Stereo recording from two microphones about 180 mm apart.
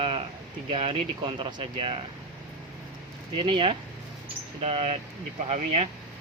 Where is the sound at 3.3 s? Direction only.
30° right (ahead or behind).